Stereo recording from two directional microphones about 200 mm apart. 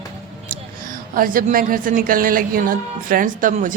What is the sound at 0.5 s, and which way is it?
A woman's voice, 45° right (ahead or behind).